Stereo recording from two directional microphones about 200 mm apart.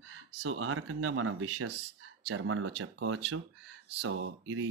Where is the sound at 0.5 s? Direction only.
90° right.